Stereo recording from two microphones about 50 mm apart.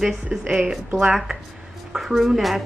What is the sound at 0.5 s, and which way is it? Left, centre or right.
Speech, centre.